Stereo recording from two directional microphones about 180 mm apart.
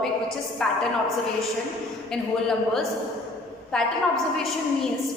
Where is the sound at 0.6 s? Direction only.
5° left (ahead or behind).